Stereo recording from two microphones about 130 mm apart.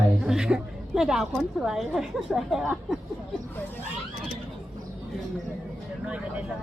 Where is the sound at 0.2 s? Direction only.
5° right (ahead or behind).